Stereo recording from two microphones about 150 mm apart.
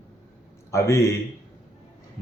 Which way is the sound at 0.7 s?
20° left (ahead or behind).